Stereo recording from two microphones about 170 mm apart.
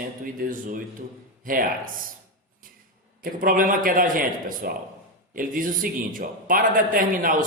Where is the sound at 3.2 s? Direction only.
55° right (ahead or behind).